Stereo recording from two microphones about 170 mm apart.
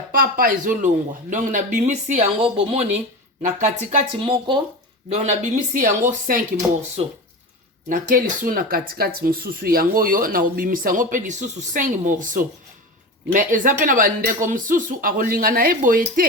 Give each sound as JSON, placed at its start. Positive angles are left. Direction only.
{"t": 0.1, "sound": "speech", "side_deg": -60}
{"t": 4.2, "sound": "speech", "side_deg": -30}
{"t": 5.0, "sound": "speech", "side_deg": -40}
{"t": 5.7, "sound": "speech", "side_deg": -50}
{"t": 7.9, "sound": "speech", "side_deg": -55}